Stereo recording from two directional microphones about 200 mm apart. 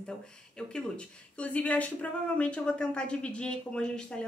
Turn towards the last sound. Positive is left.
turn(degrees=5)  # may be behind; listen again after turning